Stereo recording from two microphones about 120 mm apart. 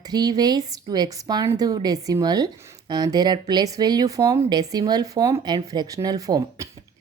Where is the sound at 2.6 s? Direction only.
20° right (ahead or behind).